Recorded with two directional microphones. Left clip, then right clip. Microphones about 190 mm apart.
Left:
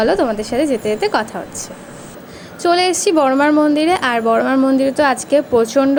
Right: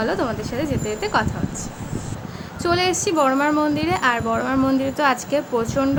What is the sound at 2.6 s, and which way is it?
Speech, 25° left (ahead or behind).